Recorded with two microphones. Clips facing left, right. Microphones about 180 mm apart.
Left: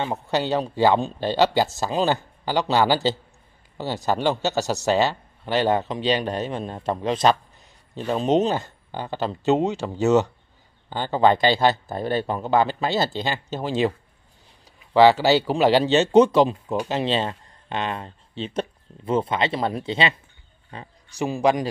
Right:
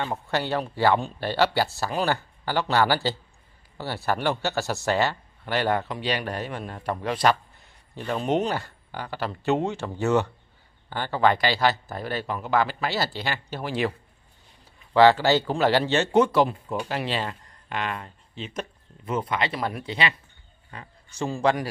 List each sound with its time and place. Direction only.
0.0 s speech: 20° left (ahead or behind)
15.0 s speech: 15° left (ahead or behind)
20.7 s a sound: 25° left (ahead or behind)
21.2 s speech: 15° left (ahead or behind)